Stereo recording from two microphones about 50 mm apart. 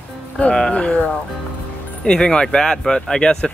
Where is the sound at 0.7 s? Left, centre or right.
Left.